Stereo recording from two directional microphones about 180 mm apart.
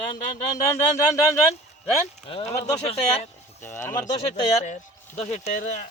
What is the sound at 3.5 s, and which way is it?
Speech, 15° left (ahead or behind).